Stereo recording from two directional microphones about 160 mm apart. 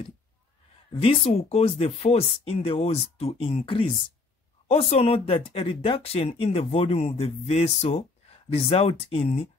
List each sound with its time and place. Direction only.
0.9 s speech: 40° left (ahead or behind)